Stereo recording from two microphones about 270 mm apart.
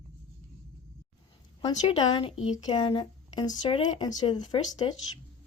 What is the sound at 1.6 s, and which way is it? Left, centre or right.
Speech, centre.